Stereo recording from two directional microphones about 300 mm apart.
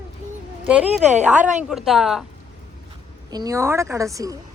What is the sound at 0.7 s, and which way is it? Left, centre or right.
A woman's voice, centre.